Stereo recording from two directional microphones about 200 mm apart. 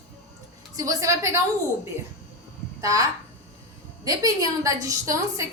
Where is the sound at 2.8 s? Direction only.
15° right (ahead or behind).